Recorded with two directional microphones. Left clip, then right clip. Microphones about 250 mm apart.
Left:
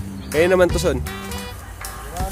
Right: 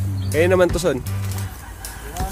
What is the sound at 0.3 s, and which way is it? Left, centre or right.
Speech, centre.